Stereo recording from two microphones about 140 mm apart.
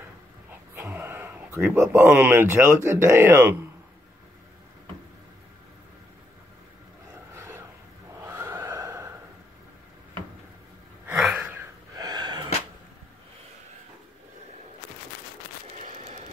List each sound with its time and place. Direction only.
0.7 s speech: 15° right (ahead or behind)
7.3 s a sound: 20° right (ahead or behind)
8.2 s neigh: 20° right (ahead or behind)
11.1 s gasp: 5° right (ahead or behind)
12.0 s sneeze: 30° right (ahead or behind)